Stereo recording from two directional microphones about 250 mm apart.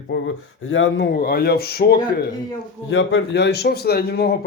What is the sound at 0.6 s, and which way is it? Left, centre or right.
A man's voice, left.